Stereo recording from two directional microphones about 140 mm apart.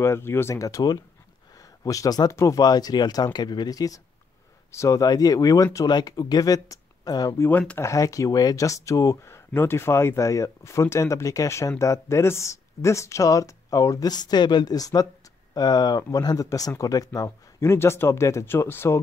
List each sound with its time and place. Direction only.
0.0 s speech: 20° left (ahead or behind)